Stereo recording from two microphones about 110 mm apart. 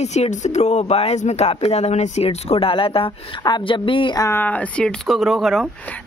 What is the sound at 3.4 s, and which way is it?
Speech, 40° left (ahead or behind).